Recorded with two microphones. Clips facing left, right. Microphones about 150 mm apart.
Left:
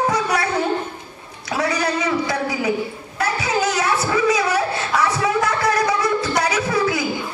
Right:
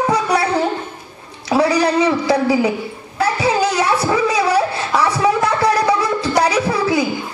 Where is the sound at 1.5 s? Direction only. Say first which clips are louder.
Right 7 dB; 30° right (ahead or behind).